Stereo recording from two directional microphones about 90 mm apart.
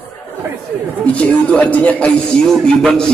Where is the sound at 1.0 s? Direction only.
15° left (ahead or behind).